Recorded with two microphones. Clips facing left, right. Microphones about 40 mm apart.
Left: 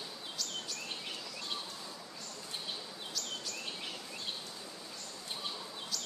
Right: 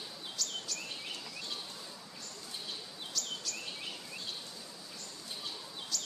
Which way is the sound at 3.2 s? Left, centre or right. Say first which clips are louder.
Right 2 dB; centre.